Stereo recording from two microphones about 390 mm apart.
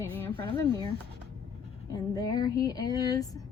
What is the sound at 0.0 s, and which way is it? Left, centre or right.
Speech, centre.